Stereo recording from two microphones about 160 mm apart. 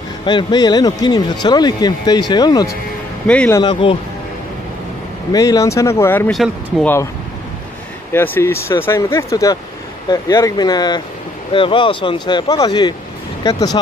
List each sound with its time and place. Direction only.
0.2 s speech: 30° left (ahead or behind)
3.3 s speech: 5° left (ahead or behind)
3.5 s speech: 30° left (ahead or behind)
5.3 s speech: 20° left (ahead or behind)
6.3 s speech: centre (ahead or behind)
8.1 s speech: 15° left (ahead or behind)